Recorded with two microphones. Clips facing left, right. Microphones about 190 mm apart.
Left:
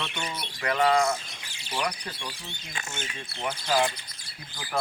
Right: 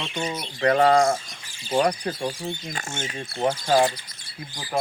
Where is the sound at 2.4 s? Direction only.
40° right (ahead or behind).